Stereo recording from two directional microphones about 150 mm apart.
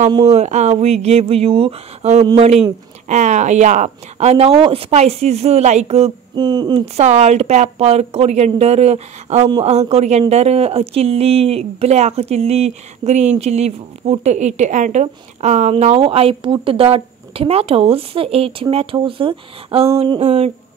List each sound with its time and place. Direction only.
0.2 s speech: 45° right (ahead or behind)
6.3 s speech: 30° right (ahead or behind)
7.0 s speech: 50° right (ahead or behind)